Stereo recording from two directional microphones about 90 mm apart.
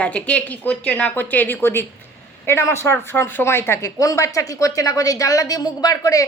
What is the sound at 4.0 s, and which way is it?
Speech, 40° left (ahead or behind).